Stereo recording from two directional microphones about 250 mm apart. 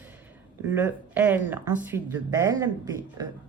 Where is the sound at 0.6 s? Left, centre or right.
Centre.